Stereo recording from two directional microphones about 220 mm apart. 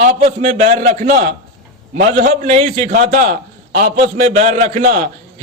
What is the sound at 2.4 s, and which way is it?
A man's voice, 30° right (ahead or behind).